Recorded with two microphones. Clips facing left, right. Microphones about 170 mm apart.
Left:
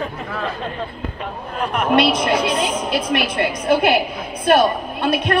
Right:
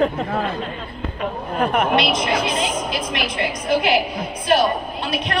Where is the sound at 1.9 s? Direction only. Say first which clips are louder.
Left 3 dB; 55° left (ahead or behind).